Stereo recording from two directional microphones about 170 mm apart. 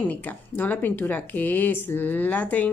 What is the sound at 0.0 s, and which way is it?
Speech, 10° left (ahead or behind).